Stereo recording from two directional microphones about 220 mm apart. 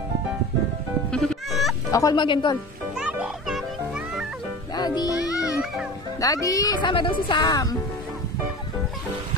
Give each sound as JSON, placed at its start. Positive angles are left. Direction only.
{"t": 1.1, "sound": "music", "side_deg": 0}
{"t": 1.9, "sound": "speech", "side_deg": 15}
{"t": 3.0, "sound": "music", "side_deg": -5}
{"t": 4.7, "sound": "music", "side_deg": 20}
{"t": 6.2, "sound": "a woman's voice", "side_deg": 15}